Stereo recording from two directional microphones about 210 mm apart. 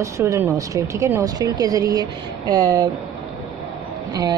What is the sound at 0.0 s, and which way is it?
Speech, 15° right (ahead or behind).